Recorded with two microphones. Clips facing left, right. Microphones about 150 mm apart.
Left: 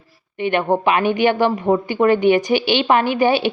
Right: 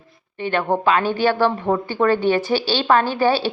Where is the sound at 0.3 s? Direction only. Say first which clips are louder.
Left 3 dB; 15° left (ahead or behind).